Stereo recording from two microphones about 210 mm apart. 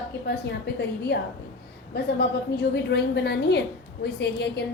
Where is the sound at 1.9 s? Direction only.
55° left (ahead or behind).